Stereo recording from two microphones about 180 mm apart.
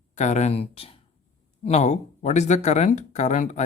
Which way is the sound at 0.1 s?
40° left (ahead or behind).